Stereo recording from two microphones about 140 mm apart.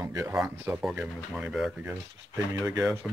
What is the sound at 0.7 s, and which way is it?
Speech, 5° right (ahead or behind).